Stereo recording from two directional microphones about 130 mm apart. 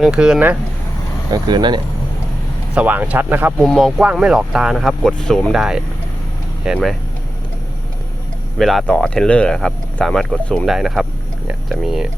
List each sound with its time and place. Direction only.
0.0 s speech: 5° right (ahead or behind)
1.3 s speech: 35° right (ahead or behind)
2.7 s speech: 15° right (ahead or behind)
3.6 s speech: centre (ahead or behind)
8.5 s speech: centre (ahead or behind)